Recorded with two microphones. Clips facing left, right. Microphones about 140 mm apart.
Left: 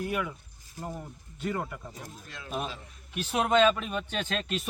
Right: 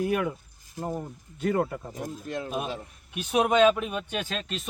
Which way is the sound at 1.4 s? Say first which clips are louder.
Right 7 dB; 45° right (ahead or behind).